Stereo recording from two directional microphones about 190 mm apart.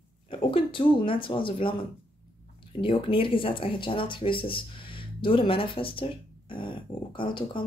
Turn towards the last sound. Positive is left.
turn(degrees=25)  # may be behind; listen again after turning